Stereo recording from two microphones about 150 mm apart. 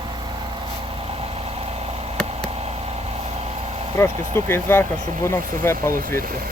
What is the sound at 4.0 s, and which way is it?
Speech, 20° left (ahead or behind).